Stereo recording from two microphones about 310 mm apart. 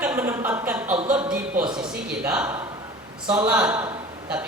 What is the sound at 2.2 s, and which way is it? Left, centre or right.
A man's voice, centre.